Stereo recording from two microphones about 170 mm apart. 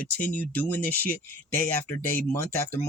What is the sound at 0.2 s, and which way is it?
Speech, 10° left (ahead or behind).